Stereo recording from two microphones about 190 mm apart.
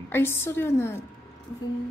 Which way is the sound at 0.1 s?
10° left (ahead or behind).